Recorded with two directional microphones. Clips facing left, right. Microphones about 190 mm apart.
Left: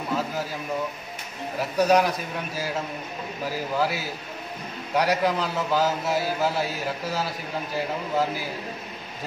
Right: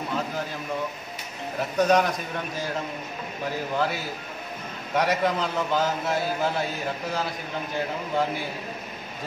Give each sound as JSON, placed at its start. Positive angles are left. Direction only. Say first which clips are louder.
{"t": 1.6, "sound": "a man's voice", "louder": "left 1 dB", "side_deg": 0}